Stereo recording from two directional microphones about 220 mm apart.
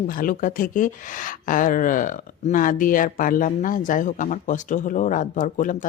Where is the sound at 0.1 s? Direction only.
40° left (ahead or behind).